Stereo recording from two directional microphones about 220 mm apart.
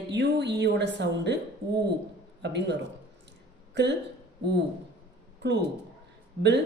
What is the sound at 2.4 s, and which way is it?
Speech, 50° right (ahead or behind).